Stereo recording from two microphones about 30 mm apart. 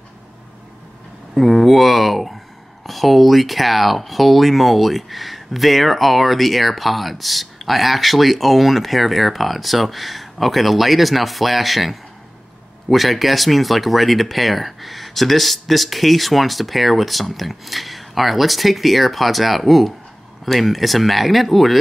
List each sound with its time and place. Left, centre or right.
1.3 s speech: centre